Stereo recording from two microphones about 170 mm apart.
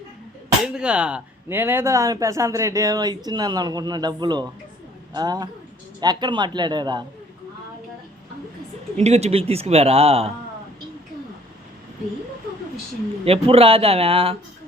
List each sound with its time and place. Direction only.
0.6 s speech: 5° right (ahead or behind); by 7.0 s 25° right (ahead or behind)
9.0 s speech: 40° right (ahead or behind)
13.2 s speech: 35° right (ahead or behind)